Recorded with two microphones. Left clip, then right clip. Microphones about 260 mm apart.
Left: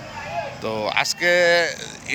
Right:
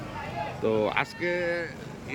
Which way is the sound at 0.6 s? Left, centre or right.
Centre.